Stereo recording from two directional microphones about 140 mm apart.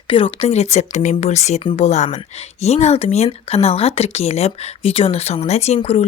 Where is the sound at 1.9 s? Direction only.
55° left (ahead or behind).